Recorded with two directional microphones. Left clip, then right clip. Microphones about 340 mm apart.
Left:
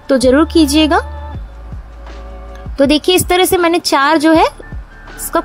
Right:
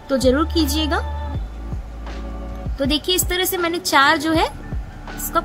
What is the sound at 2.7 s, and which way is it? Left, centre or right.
A woman's voice, centre.